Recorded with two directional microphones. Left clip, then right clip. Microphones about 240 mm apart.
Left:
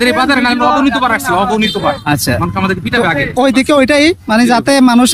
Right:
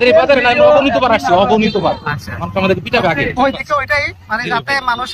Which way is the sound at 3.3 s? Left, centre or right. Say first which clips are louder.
Left 5 dB; left.